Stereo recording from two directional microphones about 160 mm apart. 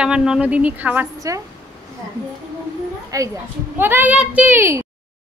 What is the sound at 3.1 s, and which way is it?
A woman's voice, 20° right (ahead or behind).